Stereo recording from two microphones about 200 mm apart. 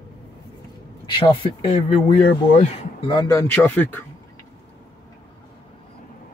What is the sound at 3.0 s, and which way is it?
Speech, 20° left (ahead or behind).